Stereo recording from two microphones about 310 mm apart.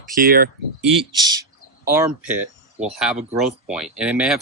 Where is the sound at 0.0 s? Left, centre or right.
Right.